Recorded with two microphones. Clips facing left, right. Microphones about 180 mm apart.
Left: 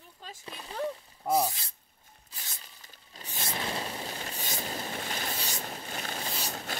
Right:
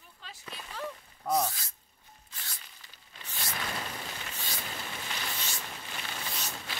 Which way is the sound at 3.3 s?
25° left (ahead or behind).